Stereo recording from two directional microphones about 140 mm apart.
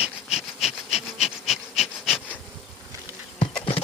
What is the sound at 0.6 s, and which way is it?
Wood, 50° left (ahead or behind).